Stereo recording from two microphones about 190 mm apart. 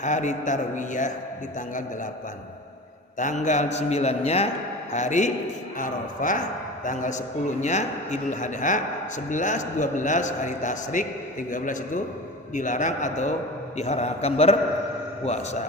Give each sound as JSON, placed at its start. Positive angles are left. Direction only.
{"t": 0.0, "sound": "a man's voice", "side_deg": 40}
{"t": 3.2, "sound": "a man's voice", "side_deg": 40}